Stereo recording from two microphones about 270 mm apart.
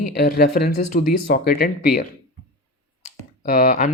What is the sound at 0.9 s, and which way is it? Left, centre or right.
Speech, left.